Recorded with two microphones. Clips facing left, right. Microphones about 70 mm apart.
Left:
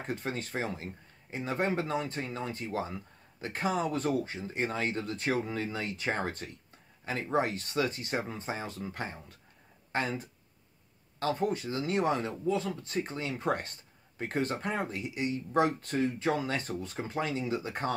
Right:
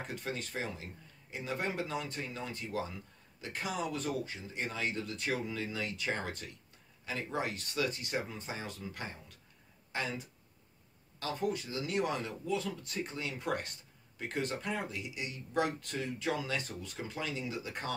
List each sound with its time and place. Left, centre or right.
0.0 s speech: left